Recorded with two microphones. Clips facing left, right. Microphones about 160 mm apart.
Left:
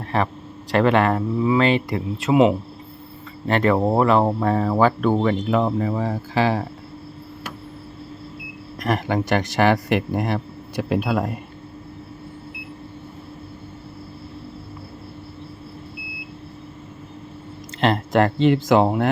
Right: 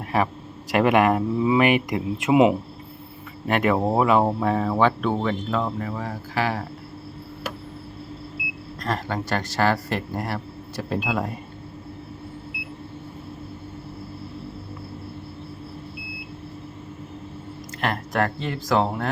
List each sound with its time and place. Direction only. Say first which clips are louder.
0.1 s speech: left 1 dB; 10° right (ahead or behind)
5.5 s a man's voice: left 6 dB; 25° left (ahead or behind)
8.8 s a man's voice: left 5 dB; 15° left (ahead or behind)
17.7 s speech: left 6 dB; 25° left (ahead or behind)
18.3 s speech: left 13 dB; 90° left
18.7 s a man's voice: left 5 dB; 20° left (ahead or behind)